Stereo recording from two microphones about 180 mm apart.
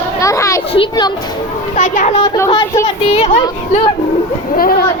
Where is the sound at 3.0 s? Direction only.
35° left (ahead or behind).